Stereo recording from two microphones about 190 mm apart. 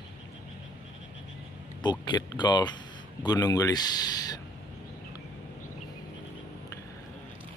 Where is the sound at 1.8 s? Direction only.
25° left (ahead or behind).